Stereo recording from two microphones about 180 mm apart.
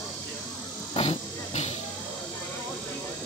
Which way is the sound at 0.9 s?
35° left (ahead or behind).